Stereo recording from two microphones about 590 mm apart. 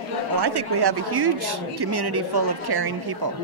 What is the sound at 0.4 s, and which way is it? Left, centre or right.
A woman's voice, right.